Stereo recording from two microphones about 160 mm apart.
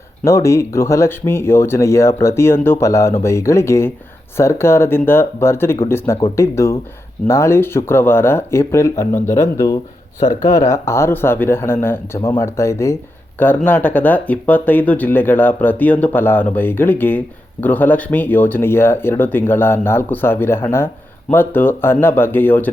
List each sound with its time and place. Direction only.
0.3 s speech: 15° left (ahead or behind)